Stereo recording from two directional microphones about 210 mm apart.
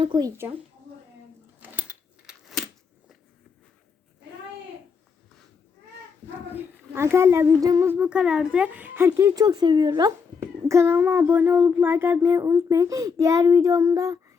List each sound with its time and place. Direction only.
0.0 s a child's voice: 20° right (ahead or behind)
1.7 s keys jangling: 5° right (ahead or behind)
6.5 s a child's voice: 10° right (ahead or behind)